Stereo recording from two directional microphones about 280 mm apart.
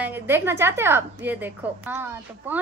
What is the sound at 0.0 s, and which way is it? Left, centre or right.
A woman's voice, centre.